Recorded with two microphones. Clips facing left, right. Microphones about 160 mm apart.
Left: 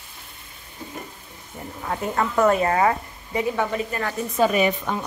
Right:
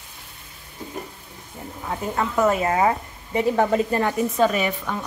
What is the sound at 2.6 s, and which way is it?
Speech, 20° right (ahead or behind).